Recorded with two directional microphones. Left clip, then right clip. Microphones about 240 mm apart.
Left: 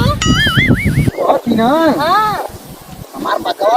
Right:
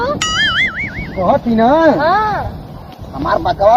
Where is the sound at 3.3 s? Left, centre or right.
Left.